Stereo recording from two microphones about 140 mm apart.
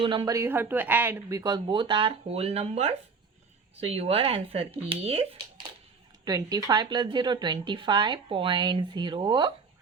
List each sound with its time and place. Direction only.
0.0 s speech: 35° right (ahead or behind)
0.3 s speech: 20° right (ahead or behind); by 5.2 s 40° right (ahead or behind)
6.2 s speech: 25° right (ahead or behind)